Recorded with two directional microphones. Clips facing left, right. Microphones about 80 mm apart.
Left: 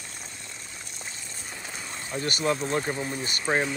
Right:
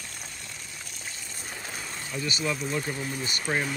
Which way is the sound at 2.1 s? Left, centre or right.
Left.